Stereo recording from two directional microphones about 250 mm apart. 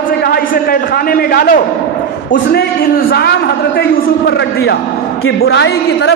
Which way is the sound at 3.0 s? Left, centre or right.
Left.